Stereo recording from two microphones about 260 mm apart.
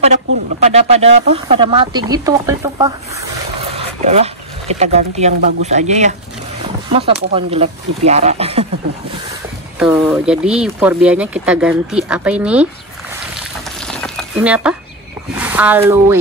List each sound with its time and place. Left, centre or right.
0.0 s speech: right
3.7 s speech: right
9.8 s speech: centre
13.7 s a sound: centre
15.3 s speech: centre